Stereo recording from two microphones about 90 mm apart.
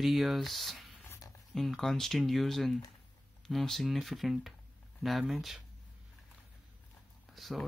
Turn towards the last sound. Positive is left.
turn(degrees=0)  # may be behind; listen again after turning